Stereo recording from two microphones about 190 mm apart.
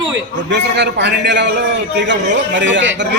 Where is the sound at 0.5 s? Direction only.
65° right (ahead or behind).